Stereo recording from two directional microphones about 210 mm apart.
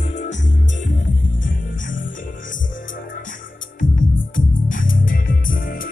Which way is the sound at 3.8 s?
40° left (ahead or behind).